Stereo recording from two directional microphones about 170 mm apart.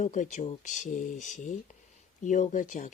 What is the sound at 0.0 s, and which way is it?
Speech, 45° left (ahead or behind).